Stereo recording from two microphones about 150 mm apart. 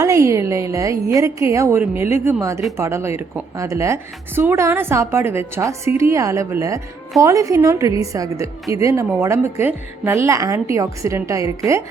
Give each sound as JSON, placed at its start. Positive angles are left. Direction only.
{"t": 0.0, "sound": "a woman's voice", "side_deg": -20}